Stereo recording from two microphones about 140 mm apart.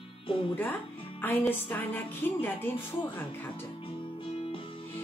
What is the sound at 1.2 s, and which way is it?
Speech, 15° left (ahead or behind).